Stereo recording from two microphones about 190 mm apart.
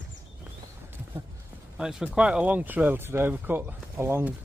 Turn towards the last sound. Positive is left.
turn(degrees=-10)  # may be behind; listen again after turning